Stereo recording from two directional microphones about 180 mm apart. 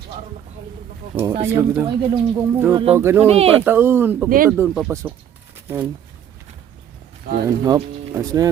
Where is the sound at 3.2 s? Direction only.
35° right (ahead or behind).